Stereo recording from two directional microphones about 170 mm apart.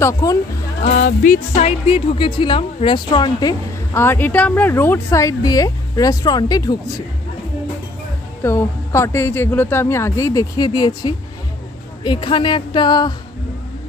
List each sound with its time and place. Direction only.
0.0 s a woman's voice: 20° left (ahead or behind)
0.8 s music: 45° left (ahead or behind)
1.9 s a woman's voice: 30° left (ahead or behind)
8.4 s a woman's voice: 15° left (ahead or behind)